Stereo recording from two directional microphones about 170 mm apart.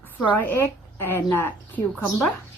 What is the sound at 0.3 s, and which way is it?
A woman's voice, 10° left (ahead or behind).